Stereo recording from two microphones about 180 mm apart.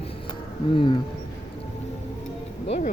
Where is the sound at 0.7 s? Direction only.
30° left (ahead or behind).